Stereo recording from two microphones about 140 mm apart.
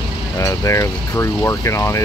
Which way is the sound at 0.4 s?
20° left (ahead or behind).